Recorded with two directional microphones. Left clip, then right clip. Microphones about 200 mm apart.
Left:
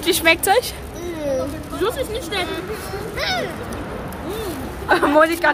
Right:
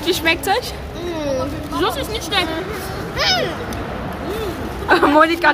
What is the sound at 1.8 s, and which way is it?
Speech, 40° right (ahead or behind).